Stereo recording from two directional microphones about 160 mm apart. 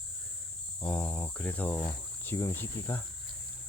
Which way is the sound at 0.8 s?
5° left (ahead or behind).